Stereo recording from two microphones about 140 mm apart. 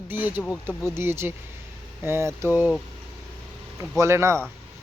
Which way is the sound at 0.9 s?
15° right (ahead or behind).